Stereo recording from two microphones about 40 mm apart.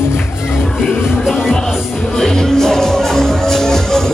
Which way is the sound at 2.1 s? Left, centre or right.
Centre.